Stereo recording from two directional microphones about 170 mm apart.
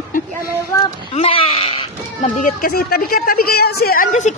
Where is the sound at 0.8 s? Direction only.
35° left (ahead or behind).